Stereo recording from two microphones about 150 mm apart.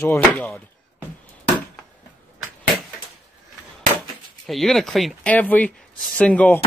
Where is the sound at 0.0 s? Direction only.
15° left (ahead or behind).